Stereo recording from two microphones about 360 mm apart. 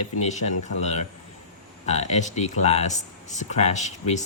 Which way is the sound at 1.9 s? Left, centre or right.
Centre.